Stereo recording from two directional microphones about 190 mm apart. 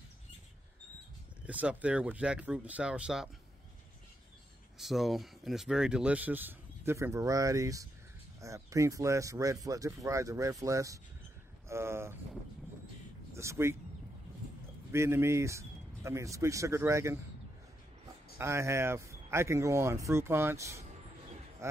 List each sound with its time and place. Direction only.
1.4 s speech: 5° right (ahead or behind)
4.7 s speech: centre (ahead or behind)
13.3 s speech: 15° right (ahead or behind)
14.9 s speech: 15° right (ahead or behind)
18.4 s speech: 15° right (ahead or behind)